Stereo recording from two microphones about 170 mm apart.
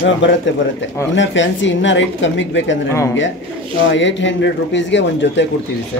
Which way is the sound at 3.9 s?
90° left.